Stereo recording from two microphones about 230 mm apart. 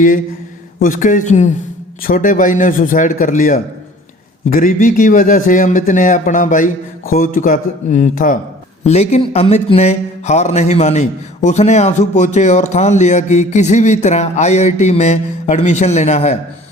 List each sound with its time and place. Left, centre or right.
0.8 s a man's voice: left